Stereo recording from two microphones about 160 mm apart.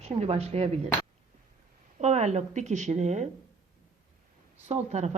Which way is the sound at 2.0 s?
45° right (ahead or behind).